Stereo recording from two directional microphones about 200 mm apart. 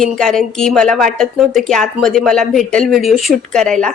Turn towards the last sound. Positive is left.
turn(degrees=0)  # may be behind; listen again after turning